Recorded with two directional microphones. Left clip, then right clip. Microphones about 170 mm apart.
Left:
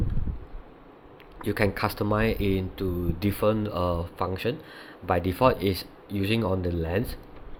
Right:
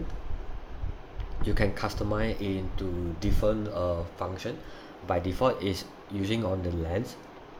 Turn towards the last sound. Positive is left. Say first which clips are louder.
# left 3 dB
turn(degrees=35)  # may be behind; listen again after turning